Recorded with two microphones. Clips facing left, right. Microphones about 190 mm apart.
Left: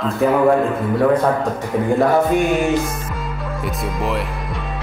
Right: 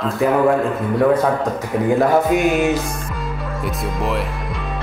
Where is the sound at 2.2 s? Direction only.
5° right (ahead or behind).